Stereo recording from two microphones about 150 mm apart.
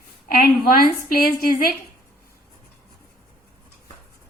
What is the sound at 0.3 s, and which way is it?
A woman's voice, 75° left (ahead or behind).